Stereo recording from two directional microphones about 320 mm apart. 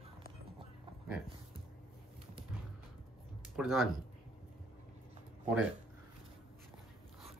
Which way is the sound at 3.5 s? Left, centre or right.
Centre.